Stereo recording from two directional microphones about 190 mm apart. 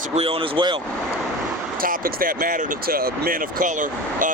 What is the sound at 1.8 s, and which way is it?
Speech, 50° right (ahead or behind).